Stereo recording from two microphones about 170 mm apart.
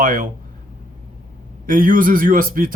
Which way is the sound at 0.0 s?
55° right (ahead or behind).